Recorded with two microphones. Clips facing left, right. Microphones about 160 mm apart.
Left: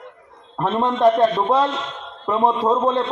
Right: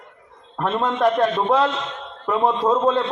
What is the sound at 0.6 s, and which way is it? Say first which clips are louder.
A man's voice: left 2 dB; 15° left (ahead or behind).